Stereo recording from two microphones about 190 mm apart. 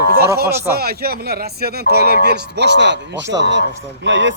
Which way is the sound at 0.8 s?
55° right (ahead or behind).